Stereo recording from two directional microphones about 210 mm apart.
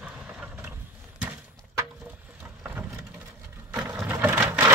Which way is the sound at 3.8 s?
15° right (ahead or behind).